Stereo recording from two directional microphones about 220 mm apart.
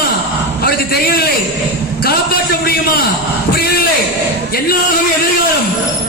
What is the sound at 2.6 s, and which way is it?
Speech, 45° left (ahead or behind).